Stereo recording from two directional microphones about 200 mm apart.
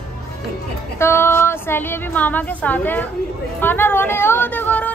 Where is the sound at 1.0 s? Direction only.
10° left (ahead or behind).